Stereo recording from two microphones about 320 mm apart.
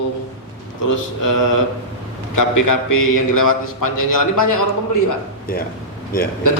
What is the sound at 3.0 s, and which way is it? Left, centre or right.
Mantra, left.